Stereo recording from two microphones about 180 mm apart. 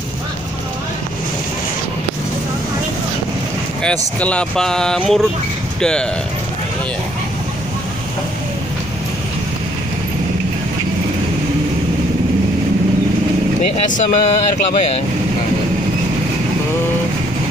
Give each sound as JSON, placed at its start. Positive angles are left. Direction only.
{"t": 3.8, "sound": "speech", "side_deg": 5}
{"t": 13.8, "sound": "speech", "side_deg": 45}